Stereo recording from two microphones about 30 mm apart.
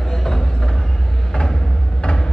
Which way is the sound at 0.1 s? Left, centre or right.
Centre.